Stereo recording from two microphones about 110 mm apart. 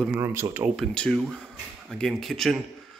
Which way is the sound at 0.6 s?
Centre (ahead or behind).